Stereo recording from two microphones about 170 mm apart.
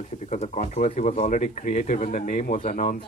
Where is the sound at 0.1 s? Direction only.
40° left (ahead or behind).